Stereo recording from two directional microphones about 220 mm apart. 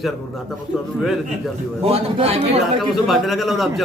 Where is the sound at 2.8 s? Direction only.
Centre (ahead or behind).